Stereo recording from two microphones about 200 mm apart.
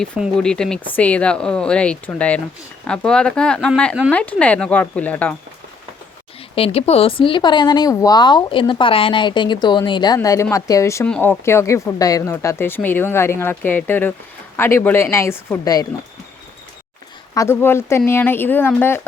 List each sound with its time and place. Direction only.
0.0 s speech: 5° left (ahead or behind)
6.6 s speech: 30° left (ahead or behind)
17.3 s speech: 15° left (ahead or behind)